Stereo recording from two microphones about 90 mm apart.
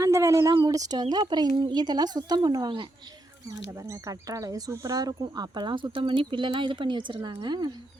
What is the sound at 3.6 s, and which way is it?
Speech, 35° right (ahead or behind).